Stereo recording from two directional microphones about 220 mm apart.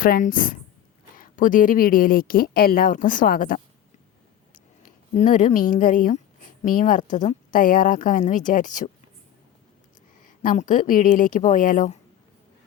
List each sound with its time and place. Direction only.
0.0 s a woman's voice: 40° left (ahead or behind)
10.4 s a woman's voice: 35° left (ahead or behind)